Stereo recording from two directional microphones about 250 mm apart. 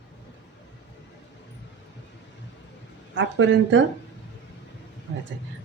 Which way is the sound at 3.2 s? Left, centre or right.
Right.